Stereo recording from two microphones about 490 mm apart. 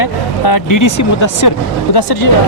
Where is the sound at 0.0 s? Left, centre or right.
Left.